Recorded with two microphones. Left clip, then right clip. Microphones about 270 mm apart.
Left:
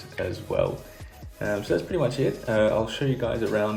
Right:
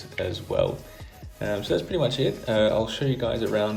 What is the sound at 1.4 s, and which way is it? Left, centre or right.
Speech, left.